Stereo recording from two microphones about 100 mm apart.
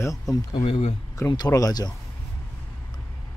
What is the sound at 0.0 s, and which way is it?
Speech, 35° left (ahead or behind).